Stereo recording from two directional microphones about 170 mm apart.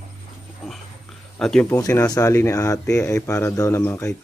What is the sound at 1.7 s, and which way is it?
Speech, 20° left (ahead or behind).